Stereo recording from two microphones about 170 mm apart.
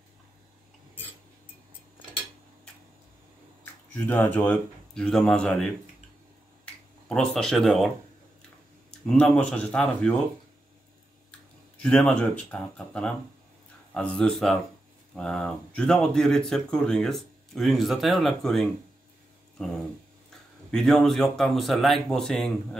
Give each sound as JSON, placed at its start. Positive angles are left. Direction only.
{"t": 3.9, "sound": "speech", "side_deg": 10}
{"t": 9.0, "sound": "speech", "side_deg": 5}
{"t": 11.8, "sound": "speech", "side_deg": 5}